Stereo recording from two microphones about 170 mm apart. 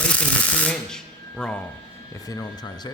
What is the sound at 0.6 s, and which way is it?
Speech, 5° left (ahead or behind).